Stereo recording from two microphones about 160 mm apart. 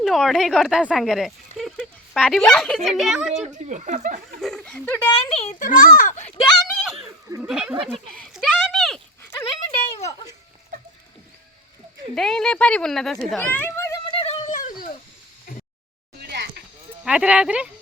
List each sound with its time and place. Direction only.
0.0 s speech: centre (ahead or behind)
3.4 s speech: 45° right (ahead or behind)
4.4 s speech: centre (ahead or behind)
5.3 s a child's voice: 40° left (ahead or behind)
5.5 s a child's voice: 55° left (ahead or behind)
6.4 s a sound: centre (ahead or behind)
7.4 s speech: 5° right (ahead or behind)
7.9 s speech: 10° left (ahead or behind)
8.3 s a sound: centre (ahead or behind)
9.6 s a sound: 35° left (ahead or behind)
12.1 s speech: 5° left (ahead or behind)
14.1 s a sound: 40° left (ahead or behind); by 14.9 s 55° left (ahead or behind)
17.0 s speech: 5° right (ahead or behind)